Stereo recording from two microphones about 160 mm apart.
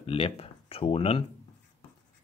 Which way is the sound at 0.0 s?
35° left (ahead or behind).